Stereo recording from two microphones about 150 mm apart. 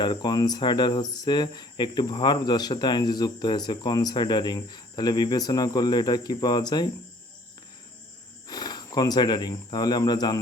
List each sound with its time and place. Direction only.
0.0 s speech: 30° left (ahead or behind)
8.4 s speech: 30° left (ahead or behind)